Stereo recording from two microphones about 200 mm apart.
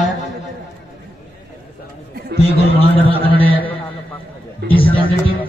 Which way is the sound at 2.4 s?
30° left (ahead or behind).